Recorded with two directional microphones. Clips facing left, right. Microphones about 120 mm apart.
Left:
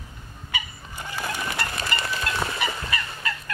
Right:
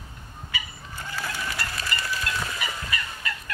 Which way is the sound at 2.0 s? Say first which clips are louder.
Left 2 dB; 65° left (ahead or behind).